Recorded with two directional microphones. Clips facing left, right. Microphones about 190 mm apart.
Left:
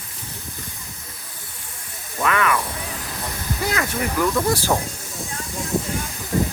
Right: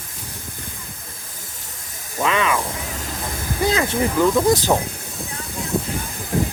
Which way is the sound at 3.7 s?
25° right (ahead or behind).